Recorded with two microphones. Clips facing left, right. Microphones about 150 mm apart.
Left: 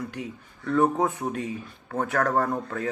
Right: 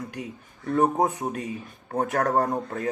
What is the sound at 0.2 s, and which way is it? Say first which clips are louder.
Speech: even; 35° right (ahead or behind).